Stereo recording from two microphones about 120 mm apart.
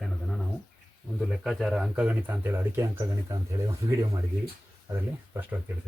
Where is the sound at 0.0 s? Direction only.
Centre (ahead or behind).